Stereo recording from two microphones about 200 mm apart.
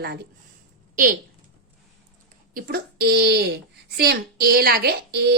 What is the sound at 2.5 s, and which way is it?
A woman's voice, 50° right (ahead or behind).